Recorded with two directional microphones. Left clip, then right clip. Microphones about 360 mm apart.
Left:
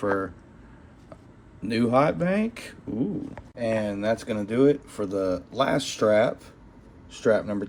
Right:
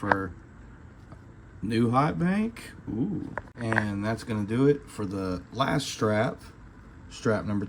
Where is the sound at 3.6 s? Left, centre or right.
Centre.